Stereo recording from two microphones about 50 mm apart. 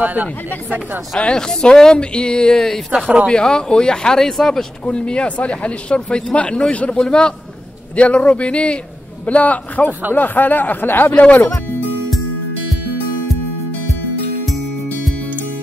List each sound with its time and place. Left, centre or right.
0.0 s speech: right
1.1 s speech: centre
4.8 s speech: left
11.1 s speech: left